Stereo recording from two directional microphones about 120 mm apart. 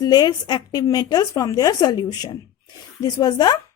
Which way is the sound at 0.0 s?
35° left (ahead or behind).